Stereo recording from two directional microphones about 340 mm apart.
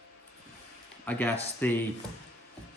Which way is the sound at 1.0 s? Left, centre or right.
Centre.